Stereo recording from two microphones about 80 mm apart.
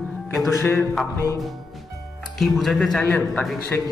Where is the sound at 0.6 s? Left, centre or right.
Left.